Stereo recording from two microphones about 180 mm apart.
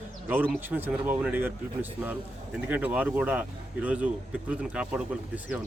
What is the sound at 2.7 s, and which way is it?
Speech, 10° right (ahead or behind).